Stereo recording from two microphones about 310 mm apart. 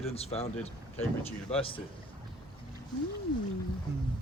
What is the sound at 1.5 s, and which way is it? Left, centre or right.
Speech, centre.